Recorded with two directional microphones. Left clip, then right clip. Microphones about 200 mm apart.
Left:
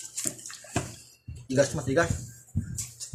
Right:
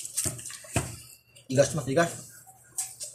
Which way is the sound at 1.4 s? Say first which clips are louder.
Right 1 dB; centre (ahead or behind).